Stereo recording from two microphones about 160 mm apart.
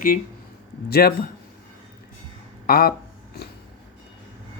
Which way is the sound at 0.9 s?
70° left (ahead or behind).